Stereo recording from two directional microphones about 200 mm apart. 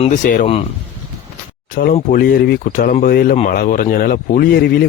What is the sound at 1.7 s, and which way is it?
A man's voice, 40° left (ahead or behind).